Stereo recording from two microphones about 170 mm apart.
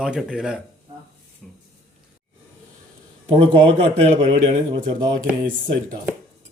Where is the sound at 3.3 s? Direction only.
35° right (ahead or behind).